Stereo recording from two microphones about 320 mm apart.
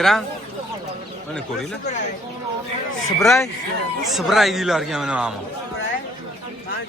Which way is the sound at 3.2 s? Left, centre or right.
Centre.